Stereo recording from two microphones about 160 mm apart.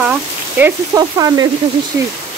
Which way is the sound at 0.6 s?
20° right (ahead or behind).